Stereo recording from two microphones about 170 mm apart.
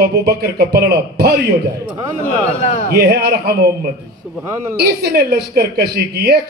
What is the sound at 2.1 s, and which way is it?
Speech, 40° left (ahead or behind).